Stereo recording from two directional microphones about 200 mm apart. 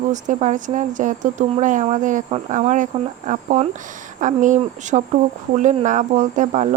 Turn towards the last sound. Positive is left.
turn(degrees=-35)  # may be behind; listen again after turning